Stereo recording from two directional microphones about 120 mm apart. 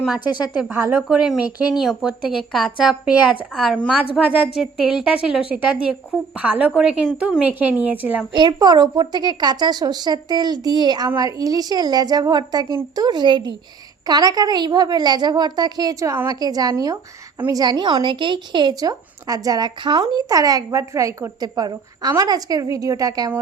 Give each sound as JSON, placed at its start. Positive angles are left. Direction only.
{"t": 0.7, "sound": "a woman's voice", "side_deg": -15}
{"t": 1.1, "sound": "a woman's voice", "side_deg": -5}
{"t": 8.3, "sound": "a woman's voice", "side_deg": -35}